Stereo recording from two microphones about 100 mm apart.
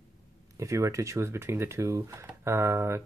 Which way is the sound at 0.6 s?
30° right (ahead or behind).